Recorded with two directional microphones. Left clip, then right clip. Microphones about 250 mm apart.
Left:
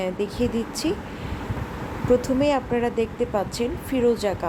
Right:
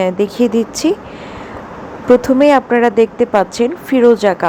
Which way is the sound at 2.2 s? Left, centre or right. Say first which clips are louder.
Right 12 dB; right.